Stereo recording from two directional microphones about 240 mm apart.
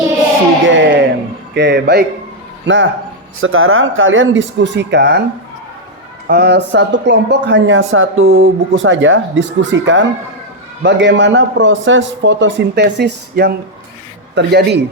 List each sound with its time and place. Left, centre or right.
0.6 s music: right
1.5 s speech: right
6.2 s speech: right